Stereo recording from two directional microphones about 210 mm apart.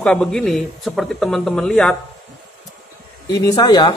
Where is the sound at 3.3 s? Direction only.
15° left (ahead or behind).